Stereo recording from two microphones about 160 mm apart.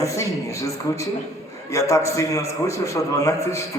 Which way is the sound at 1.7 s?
20° left (ahead or behind).